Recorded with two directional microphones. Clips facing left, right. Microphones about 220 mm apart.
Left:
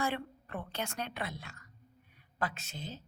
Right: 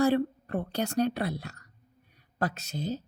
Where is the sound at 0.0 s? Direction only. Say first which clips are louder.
Right 11 dB; 40° right (ahead or behind).